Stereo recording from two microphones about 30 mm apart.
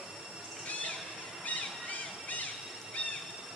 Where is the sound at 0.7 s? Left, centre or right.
Left.